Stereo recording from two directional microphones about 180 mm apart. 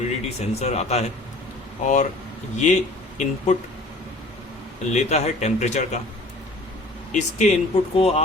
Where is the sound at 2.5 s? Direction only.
40° left (ahead or behind).